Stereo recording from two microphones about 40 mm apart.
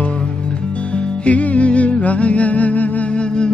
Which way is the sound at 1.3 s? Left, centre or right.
Left.